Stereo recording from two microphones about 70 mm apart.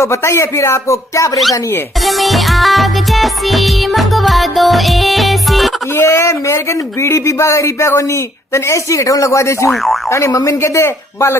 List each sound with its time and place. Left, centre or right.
0.0 s speech: left
2.0 s music: centre
5.9 s speech: left